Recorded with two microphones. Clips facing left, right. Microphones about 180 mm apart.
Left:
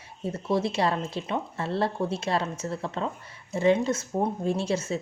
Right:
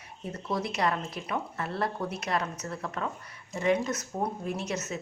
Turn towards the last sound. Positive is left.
turn(degrees=30)  # may be behind; listen again after turning